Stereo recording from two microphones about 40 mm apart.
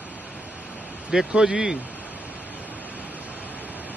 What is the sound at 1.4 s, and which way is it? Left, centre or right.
Speech, centre.